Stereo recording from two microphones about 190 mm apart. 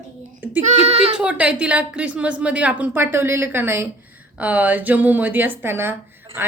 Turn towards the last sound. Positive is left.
turn(degrees=-10)  # may be behind; listen again after turning